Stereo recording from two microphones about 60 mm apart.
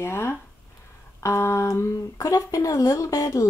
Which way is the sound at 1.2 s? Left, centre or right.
Left.